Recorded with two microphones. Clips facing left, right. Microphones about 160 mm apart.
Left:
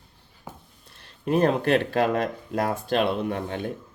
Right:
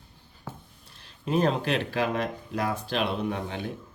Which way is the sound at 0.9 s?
55° left (ahead or behind).